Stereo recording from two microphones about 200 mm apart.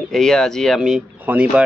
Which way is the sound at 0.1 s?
Centre (ahead or behind).